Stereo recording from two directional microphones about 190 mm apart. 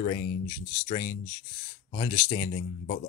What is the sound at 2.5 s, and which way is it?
Speech, 40° left (ahead or behind).